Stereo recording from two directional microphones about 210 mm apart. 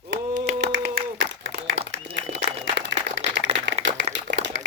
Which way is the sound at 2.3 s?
55° right (ahead or behind).